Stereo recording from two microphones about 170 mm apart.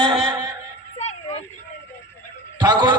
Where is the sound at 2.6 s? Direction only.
25° right (ahead or behind).